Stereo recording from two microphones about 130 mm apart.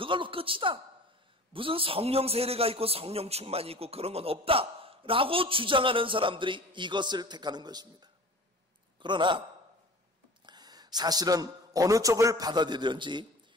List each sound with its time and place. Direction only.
0.0 s a man's voice: 40° right (ahead or behind)
10.4 s speech: 35° right (ahead or behind)